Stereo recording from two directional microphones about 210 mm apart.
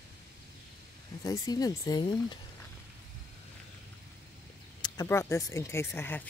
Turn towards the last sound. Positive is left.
turn(degrees=10)  # may be behind; listen again after turning